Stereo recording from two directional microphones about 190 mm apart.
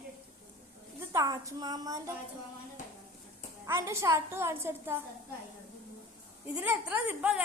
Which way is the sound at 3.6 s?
15° right (ahead or behind).